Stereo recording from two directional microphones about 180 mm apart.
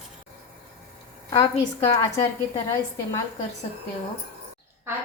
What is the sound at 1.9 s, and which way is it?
Speech, 15° left (ahead or behind).